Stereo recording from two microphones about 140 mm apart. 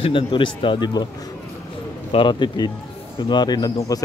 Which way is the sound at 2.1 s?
35° left (ahead or behind).